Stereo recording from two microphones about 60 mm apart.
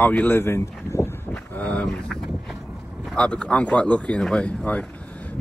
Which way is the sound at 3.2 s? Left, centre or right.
Centre.